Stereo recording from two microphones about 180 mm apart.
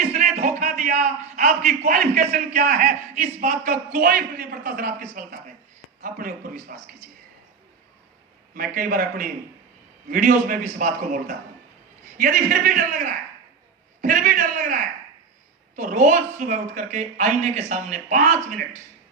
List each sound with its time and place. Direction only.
0.0 s a man's voice: 40° right (ahead or behind)
8.5 s a man's voice: 55° right (ahead or behind)